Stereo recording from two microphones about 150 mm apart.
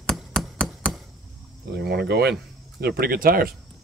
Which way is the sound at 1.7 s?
90° right.